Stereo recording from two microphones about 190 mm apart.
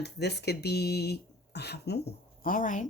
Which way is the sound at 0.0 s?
60° left (ahead or behind).